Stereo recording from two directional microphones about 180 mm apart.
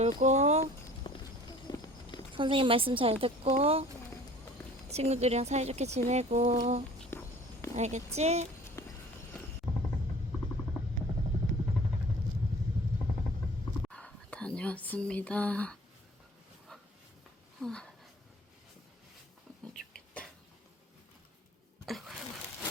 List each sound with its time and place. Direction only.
0.0 s speech: 40° right (ahead or behind)
1.1 s clip-clop: 30° left (ahead or behind)
2.3 s speech: 30° right (ahead or behind)
4.9 s speech: 35° right (ahead or behind)
7.1 s a sound: 15° left (ahead or behind)
7.8 s speech: 40° right (ahead or behind)
8.8 s clip-clop: 15° left (ahead or behind)
9.3 s music: 5° left (ahead or behind)
13.8 s whispering: 5° left (ahead or behind)
17.6 s speech: 5° left (ahead or behind)
19.7 s a sound: 5° left (ahead or behind)
21.8 s a sound: centre (ahead or behind)